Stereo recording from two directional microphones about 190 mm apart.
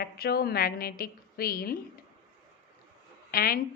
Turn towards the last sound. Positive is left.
turn(degrees=50)  # may be behind; listen again after turning